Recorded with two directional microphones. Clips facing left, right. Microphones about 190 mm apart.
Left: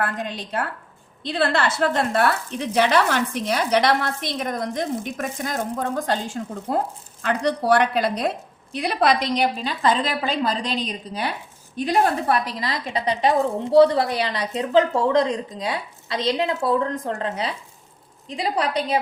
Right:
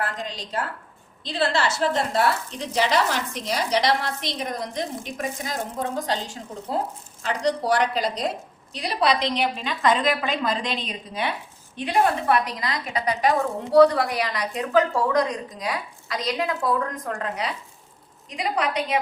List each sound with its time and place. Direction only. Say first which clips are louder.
0.0 s a woman's voice: left 3 dB; 60° left (ahead or behind); by 18.9 s 35° left (ahead or behind)